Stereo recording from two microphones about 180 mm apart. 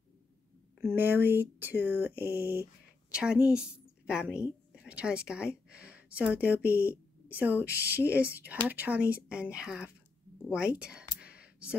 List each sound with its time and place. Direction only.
0.7 s speech: 15° right (ahead or behind)
2.4 s speech: 15° left (ahead or behind)
3.1 s a woman's voice: 5° right (ahead or behind)
6.6 s speech: 15° left (ahead or behind)
6.9 s speech: 10° right (ahead or behind)
10.5 s a sound: 5° right (ahead or behind)